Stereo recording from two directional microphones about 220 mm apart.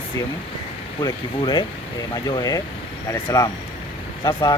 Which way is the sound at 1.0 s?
20° left (ahead or behind).